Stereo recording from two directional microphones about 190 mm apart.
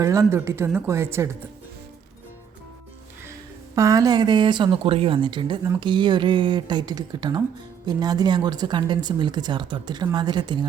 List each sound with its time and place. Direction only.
0.0 s speech: 15° right (ahead or behind)
3.8 s speech: 15° right (ahead or behind)